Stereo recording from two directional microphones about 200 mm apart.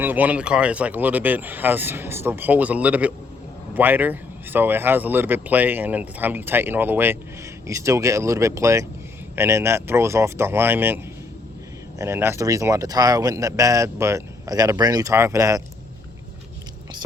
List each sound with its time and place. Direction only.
0.0 s speech: 10° right (ahead or behind)